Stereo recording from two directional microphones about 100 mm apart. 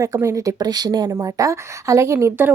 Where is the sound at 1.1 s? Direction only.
30° right (ahead or behind).